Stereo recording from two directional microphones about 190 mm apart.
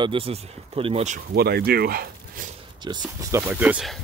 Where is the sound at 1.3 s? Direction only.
55° right (ahead or behind).